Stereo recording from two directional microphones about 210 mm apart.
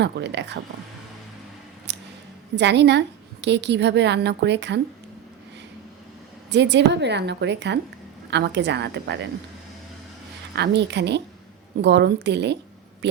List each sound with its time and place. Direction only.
0.0 s a woman's voice: 55° right (ahead or behind)
1.9 s a sound: 55° right (ahead or behind)
2.6 s a woman's voice: 55° right (ahead or behind)
6.5 s a woman's voice: 55° right (ahead or behind)
10.5 s a woman's voice: 55° right (ahead or behind)